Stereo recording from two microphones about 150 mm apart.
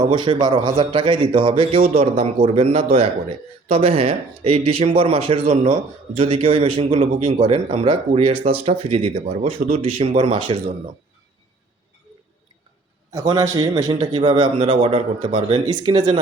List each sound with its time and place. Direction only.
0.0 s speech: 30° right (ahead or behind)
13.1 s speech: 20° right (ahead or behind)